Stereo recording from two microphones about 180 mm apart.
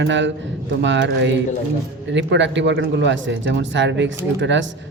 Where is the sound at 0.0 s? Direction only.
90° right.